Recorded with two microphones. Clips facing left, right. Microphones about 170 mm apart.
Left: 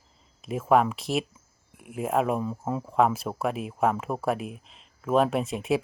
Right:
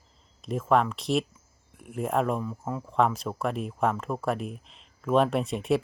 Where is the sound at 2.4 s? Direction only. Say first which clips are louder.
Left 3 dB; 20° left (ahead or behind).